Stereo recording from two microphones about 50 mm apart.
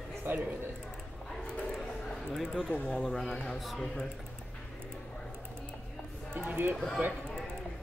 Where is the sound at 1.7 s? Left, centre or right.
Centre.